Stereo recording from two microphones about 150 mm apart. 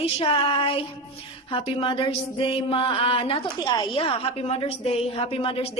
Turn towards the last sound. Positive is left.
turn(degrees=40)  # may be behind; listen again after turning